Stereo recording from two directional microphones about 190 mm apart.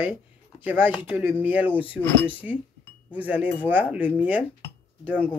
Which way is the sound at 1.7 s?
25° left (ahead or behind).